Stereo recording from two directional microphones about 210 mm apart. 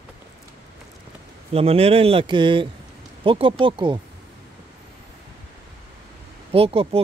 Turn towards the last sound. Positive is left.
turn(degrees=-25)  # may be behind; listen again after turning